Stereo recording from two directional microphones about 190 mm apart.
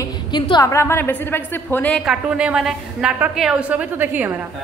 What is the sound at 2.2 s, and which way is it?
A woman's voice, 5° right (ahead or behind).